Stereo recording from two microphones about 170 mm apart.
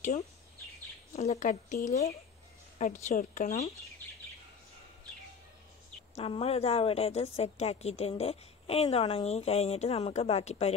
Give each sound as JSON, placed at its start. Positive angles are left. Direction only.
{"t": 1.1, "sound": "speech", "side_deg": 40}
{"t": 6.1, "sound": "a woman's voice", "side_deg": 35}